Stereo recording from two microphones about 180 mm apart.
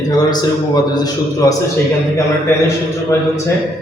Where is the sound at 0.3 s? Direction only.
20° left (ahead or behind).